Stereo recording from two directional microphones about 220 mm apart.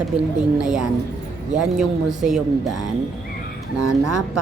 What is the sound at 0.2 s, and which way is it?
A woman's voice, 5° right (ahead or behind).